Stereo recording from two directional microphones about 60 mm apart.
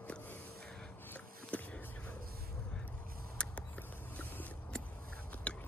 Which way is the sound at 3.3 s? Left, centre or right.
Centre.